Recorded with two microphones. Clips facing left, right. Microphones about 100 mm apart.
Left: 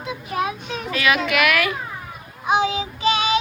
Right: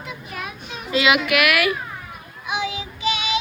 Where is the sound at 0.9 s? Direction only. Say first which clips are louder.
Right 2 dB; 20° right (ahead or behind).